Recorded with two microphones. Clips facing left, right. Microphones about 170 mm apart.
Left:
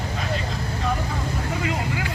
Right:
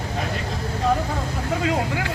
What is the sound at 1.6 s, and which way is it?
Speech, 90° right.